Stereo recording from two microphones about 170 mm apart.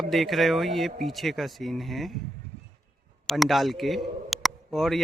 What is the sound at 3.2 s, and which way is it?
Speech, centre (ahead or behind).